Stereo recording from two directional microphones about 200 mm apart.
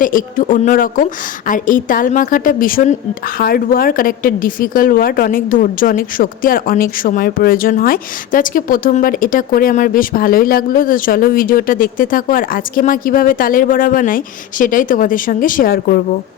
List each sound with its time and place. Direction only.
0.0 s speech: 40° left (ahead or behind)